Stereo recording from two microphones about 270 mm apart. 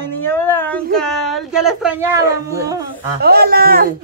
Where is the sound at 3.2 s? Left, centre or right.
Right.